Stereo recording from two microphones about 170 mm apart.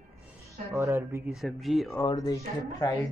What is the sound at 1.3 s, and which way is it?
Speech, centre (ahead or behind).